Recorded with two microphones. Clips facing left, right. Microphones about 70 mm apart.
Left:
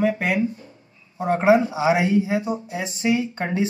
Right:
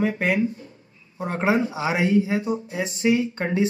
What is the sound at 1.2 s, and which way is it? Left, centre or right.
Speech, left.